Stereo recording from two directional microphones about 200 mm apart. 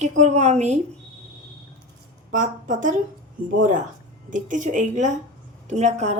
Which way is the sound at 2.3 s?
40° right (ahead or behind).